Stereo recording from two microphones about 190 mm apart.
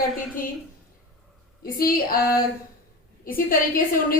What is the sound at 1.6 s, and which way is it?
A woman's voice, 50° left (ahead or behind).